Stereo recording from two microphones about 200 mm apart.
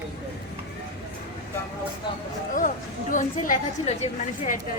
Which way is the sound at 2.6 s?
40° left (ahead or behind).